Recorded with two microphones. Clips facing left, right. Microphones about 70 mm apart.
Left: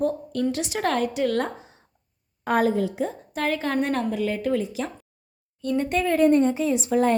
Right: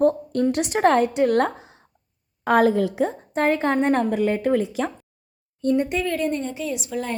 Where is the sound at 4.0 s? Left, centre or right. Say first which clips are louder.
Right 4 dB; right.